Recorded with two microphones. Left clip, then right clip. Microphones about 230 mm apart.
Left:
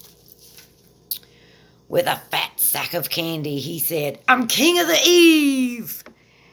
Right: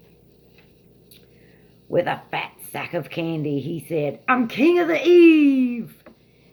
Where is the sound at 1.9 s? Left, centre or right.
Left.